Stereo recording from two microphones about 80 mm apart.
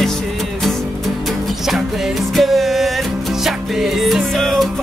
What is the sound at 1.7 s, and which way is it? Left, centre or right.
Music, centre.